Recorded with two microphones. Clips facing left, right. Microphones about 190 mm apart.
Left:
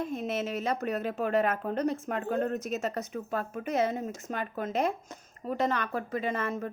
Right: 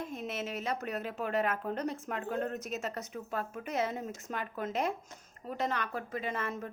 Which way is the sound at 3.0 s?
45° left (ahead or behind).